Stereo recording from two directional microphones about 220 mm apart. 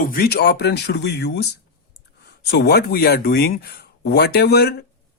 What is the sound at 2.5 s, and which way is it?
Speech, 45° left (ahead or behind).